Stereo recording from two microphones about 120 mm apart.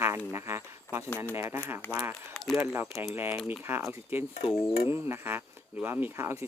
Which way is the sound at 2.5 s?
20° right (ahead or behind).